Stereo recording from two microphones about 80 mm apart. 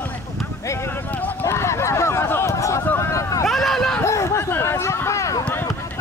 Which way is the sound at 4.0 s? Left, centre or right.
Left.